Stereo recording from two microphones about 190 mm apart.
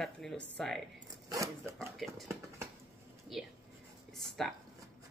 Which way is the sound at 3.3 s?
Centre (ahead or behind).